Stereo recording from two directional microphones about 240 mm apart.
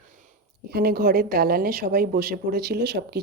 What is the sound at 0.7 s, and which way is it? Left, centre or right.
A woman's voice, right.